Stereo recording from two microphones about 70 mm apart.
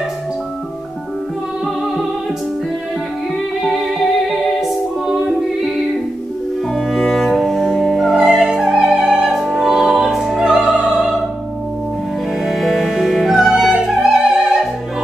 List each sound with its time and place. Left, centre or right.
3.6 s music: centre
6.7 s cello: centre
8.1 s music: centre
12.4 s music: centre